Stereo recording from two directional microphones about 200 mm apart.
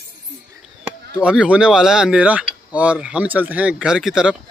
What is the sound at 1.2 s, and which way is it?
Speech, 5° right (ahead or behind).